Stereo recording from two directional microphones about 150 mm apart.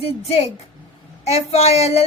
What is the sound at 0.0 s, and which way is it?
A woman's voice, 40° left (ahead or behind).